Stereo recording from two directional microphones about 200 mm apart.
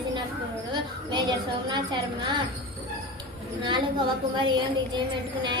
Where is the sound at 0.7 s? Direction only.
20° right (ahead or behind).